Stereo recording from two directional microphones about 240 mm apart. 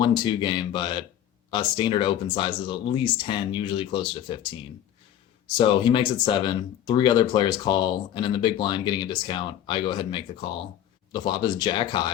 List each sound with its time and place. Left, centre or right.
0.0 s speech: centre
5.5 s speech: left